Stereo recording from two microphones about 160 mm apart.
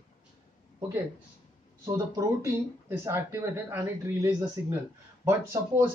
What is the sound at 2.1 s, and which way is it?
Speech, 15° right (ahead or behind).